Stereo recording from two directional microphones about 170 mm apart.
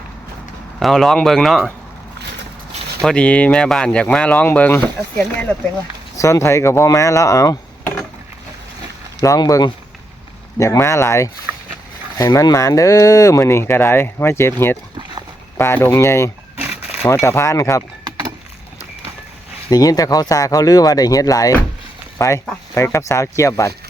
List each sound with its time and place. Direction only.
0.8 s speech: centre (ahead or behind)
3.0 s speech: 5° left (ahead or behind)
9.2 s speech: 20° left (ahead or behind)
19.7 s speech: 20° left (ahead or behind)